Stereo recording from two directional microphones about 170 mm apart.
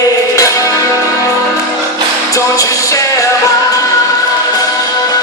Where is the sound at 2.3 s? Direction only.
20° left (ahead or behind).